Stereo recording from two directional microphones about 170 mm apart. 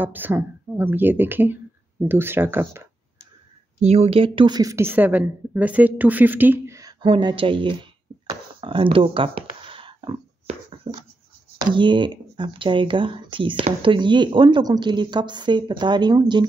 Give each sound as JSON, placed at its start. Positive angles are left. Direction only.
{"t": 0.0, "sound": "speech", "side_deg": -10}
{"t": 3.8, "sound": "a woman's voice", "side_deg": -40}